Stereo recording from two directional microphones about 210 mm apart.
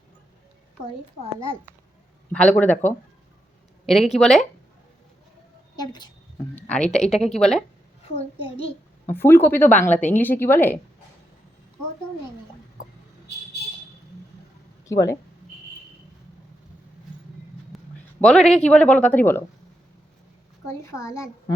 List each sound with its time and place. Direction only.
2.3 s a woman's voice: 5° left (ahead or behind)
5.7 s a woman's voice: 20° left (ahead or behind)
6.7 s speech: 5° left (ahead or behind)
8.4 s a child's voice: 25° left (ahead or behind)
9.0 s a woman's voice: 10° left (ahead or behind)
14.8 s speech: 15° left (ahead or behind)
17.7 s a sound: centre (ahead or behind)
18.2 s speech: 5° left (ahead or behind)
20.7 s a woman's voice: 15° left (ahead or behind)